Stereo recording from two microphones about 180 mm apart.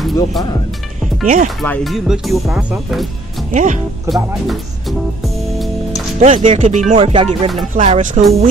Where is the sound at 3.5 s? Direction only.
45° right (ahead or behind).